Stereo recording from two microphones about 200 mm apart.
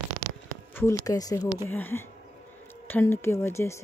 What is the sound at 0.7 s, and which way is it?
Speech, 15° left (ahead or behind).